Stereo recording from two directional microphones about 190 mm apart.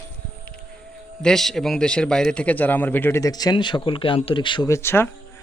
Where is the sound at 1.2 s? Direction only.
Centre (ahead or behind).